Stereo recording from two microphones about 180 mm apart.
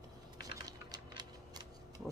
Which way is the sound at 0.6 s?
20° right (ahead or behind).